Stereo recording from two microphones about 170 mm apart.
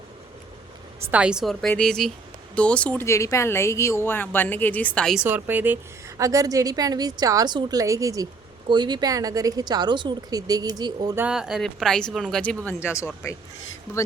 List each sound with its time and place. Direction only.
1.1 s speech: 5° right (ahead or behind)
5.2 s a woman's voice: 10° right (ahead or behind)
11.2 s speech: 5° right (ahead or behind)
12.6 s speech: 15° left (ahead or behind)